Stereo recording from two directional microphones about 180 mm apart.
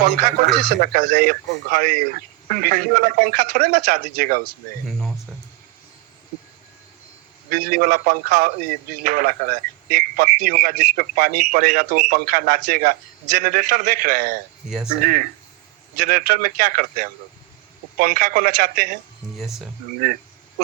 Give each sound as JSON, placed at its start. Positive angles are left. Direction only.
{"t": 0.2, "sound": "a man's voice", "side_deg": -55}
{"t": 7.5, "sound": "a man's voice", "side_deg": -50}
{"t": 16.0, "sound": "a man's voice", "side_deg": -55}
{"t": 19.4, "sound": "speech", "side_deg": 0}